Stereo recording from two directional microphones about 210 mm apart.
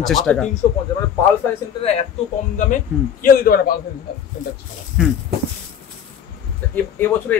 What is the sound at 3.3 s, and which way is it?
Speech, 45° left (ahead or behind).